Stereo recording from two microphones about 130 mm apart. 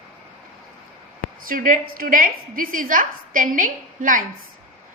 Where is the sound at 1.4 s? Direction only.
90° right.